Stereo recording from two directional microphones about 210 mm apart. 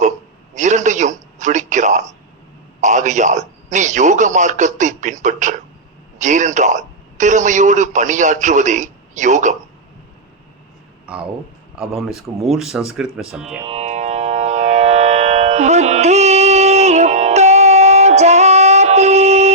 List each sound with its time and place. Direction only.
0.5 s speech: 35° right (ahead or behind)
11.0 s a sound: 5° right (ahead or behind)
11.8 s speech: 5° right (ahead or behind)
13.7 s music: 30° right (ahead or behind)